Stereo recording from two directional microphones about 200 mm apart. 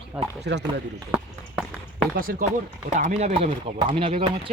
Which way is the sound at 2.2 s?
45° right (ahead or behind).